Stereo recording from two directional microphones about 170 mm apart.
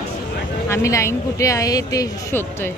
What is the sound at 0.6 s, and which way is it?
A man's voice, 15° left (ahead or behind).